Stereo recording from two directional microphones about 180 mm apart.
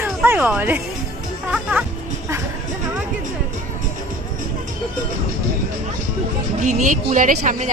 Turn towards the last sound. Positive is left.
turn(degrees=-45)  # may be behind; listen again after turning